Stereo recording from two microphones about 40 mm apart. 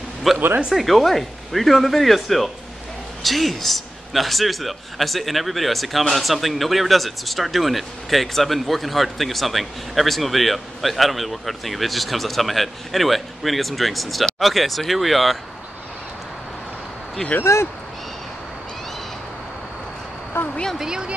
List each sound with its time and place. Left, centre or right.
0.3 s a man's voice: centre
17.2 s speech: centre
20.4 s a woman's voice: left
20.7 s a woman's voice: centre